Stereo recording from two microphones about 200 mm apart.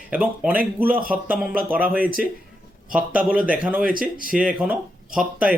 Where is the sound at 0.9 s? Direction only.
45° right (ahead or behind).